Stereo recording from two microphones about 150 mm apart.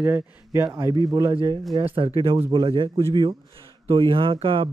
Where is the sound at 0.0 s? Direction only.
15° right (ahead or behind).